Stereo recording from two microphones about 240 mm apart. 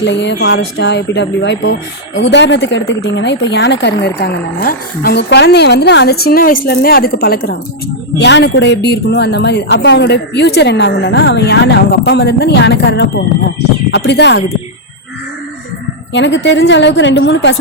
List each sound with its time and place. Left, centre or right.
0.0 s speech: left
16.1 s speech: left